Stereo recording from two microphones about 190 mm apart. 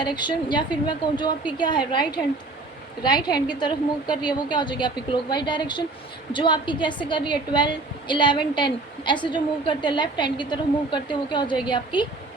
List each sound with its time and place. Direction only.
0.0 s a woman's voice: 25° left (ahead or behind)